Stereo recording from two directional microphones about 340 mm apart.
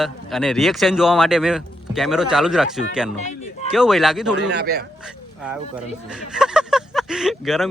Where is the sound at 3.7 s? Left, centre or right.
Centre.